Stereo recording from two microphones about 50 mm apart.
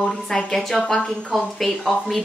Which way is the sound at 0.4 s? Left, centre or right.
Centre.